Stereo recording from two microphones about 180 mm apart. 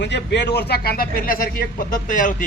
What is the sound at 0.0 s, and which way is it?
Speech, 70° left (ahead or behind).